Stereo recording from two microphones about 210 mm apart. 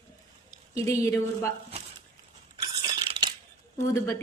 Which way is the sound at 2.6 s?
20° right (ahead or behind).